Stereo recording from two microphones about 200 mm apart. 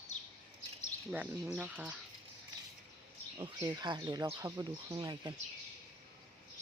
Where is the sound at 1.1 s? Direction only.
5° right (ahead or behind).